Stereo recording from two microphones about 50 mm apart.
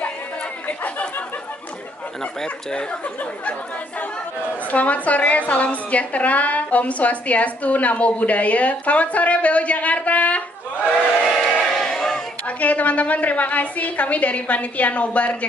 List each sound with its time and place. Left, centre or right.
0.7 s chatter: left
2.4 s a woman's voice: centre
4.6 s a woman's voice: left
11.4 s crowd: centre
12.4 s a woman's voice: left